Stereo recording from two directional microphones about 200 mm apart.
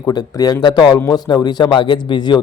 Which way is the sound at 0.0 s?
20° left (ahead or behind).